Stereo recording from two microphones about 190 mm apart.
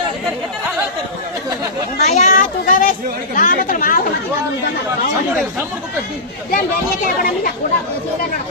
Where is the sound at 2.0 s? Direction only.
40° left (ahead or behind).